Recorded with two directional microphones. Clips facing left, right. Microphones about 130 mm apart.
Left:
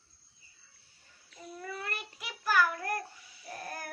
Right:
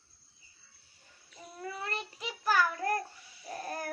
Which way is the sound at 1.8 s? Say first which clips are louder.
Right 3 dB; 30° right (ahead or behind).